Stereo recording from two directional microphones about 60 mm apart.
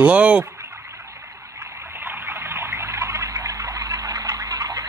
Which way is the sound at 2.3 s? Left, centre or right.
Right.